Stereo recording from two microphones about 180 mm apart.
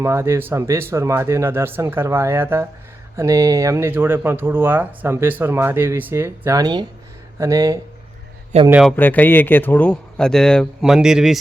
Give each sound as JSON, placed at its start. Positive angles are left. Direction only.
{"t": 0.0, "sound": "speech", "side_deg": -15}
{"t": 8.7, "sound": "a man's voice", "side_deg": 0}
{"t": 9.0, "sound": "a man's voice", "side_deg": 10}